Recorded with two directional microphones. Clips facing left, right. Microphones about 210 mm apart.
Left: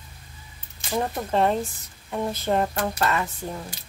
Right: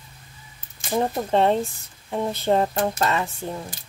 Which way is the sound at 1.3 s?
30° right (ahead or behind).